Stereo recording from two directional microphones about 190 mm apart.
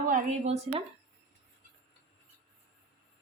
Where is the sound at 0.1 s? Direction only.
40° right (ahead or behind).